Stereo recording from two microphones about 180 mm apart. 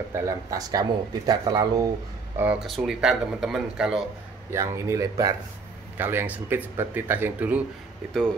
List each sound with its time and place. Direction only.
0.1 s speech: 15° right (ahead or behind)
2.3 s speech: 5° right (ahead or behind)
4.5 s speech: 15° right (ahead or behind)